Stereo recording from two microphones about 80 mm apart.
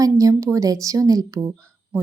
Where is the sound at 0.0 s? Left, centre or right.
Right.